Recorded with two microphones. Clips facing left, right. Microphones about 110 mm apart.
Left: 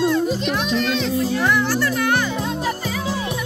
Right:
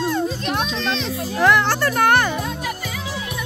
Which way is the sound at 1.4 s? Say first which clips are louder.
Right 8 dB; 90° right.